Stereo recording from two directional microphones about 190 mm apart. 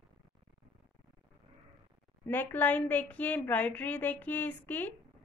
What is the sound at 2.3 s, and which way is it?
A woman's voice, 10° left (ahead or behind).